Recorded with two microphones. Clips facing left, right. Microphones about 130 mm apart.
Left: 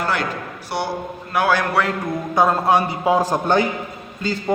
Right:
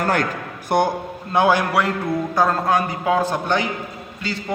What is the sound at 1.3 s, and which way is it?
Speech, 20° right (ahead or behind).